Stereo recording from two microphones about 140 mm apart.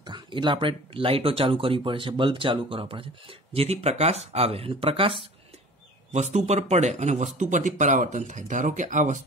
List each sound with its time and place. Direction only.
0.0 s speech: 35° right (ahead or behind)
6.1 s speech: 55° right (ahead or behind)